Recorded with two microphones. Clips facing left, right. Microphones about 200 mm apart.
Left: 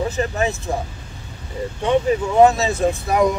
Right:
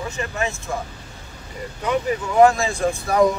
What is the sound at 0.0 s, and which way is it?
Speech, 35° left (ahead or behind).